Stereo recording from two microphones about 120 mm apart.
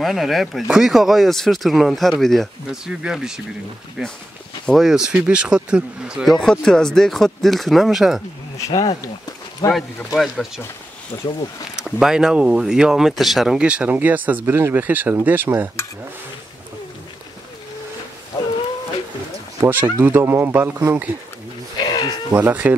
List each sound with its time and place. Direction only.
0.0 s speech: centre (ahead or behind)
6.3 s speech: 5° left (ahead or behind)
8.6 s speech: 30° left (ahead or behind)
9.7 s speech: centre (ahead or behind)
11.7 s speech: 5° right (ahead or behind)
19.6 s speech: 15° right (ahead or behind)
21.8 s sheep: 35° left (ahead or behind)
22.3 s speech: 15° right (ahead or behind)